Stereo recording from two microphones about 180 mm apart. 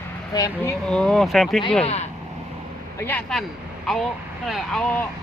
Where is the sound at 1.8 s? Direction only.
35° left (ahead or behind).